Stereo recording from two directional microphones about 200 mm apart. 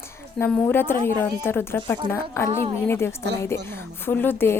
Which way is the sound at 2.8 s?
10° left (ahead or behind).